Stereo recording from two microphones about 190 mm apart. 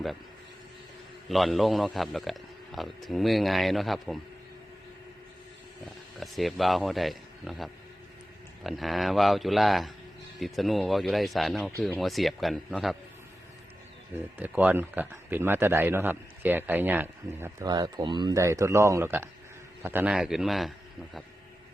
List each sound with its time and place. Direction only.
1.3 s a man's voice: centre (ahead or behind)
6.1 s a man's voice: centre (ahead or behind)
14.3 s a man's voice: 10° right (ahead or behind)
17.7 s a man's voice: 20° right (ahead or behind); by 21.2 s centre (ahead or behind)